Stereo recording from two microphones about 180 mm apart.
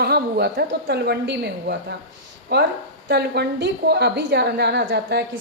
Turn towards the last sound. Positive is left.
turn(degrees=-70)  # may be behind; listen again after turning